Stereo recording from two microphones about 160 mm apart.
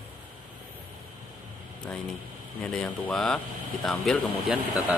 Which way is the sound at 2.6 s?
5° left (ahead or behind).